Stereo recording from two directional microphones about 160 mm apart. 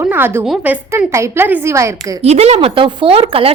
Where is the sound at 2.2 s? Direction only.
40° right (ahead or behind).